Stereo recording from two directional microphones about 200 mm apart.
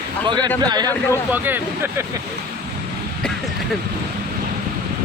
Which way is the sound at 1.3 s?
10° right (ahead or behind).